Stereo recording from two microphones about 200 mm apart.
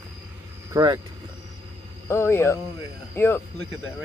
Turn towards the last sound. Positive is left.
turn(degrees=10)  # may be behind; listen again after turning